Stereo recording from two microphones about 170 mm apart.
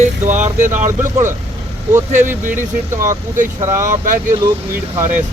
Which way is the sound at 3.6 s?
15° right (ahead or behind).